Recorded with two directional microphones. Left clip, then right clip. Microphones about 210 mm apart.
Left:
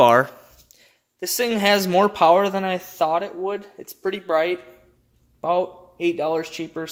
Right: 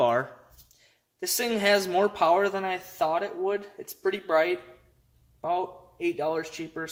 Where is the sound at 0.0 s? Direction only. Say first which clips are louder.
Left 10 dB; 55° left (ahead or behind).